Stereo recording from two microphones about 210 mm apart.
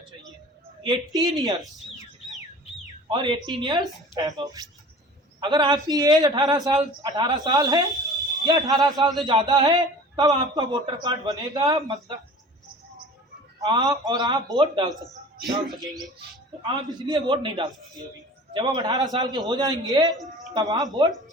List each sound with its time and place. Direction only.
0.8 s a man's voice: 20° right (ahead or behind)
3.1 s a man's voice: 20° right (ahead or behind)
13.6 s a man's voice: 20° right (ahead or behind)
15.4 s speech: centre (ahead or behind)
15.8 s a man's voice: 20° right (ahead or behind)